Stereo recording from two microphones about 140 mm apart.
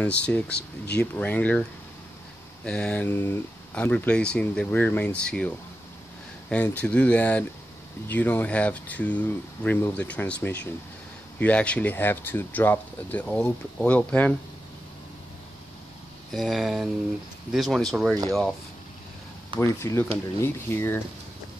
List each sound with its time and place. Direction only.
0.0 s speech: 10° left (ahead or behind)
6.5 s speech: 10° left (ahead or behind)
16.3 s speech: centre (ahead or behind)
19.6 s speech: 20° left (ahead or behind)